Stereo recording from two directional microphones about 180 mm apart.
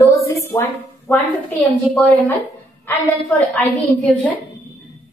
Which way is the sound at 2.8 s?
10° left (ahead or behind).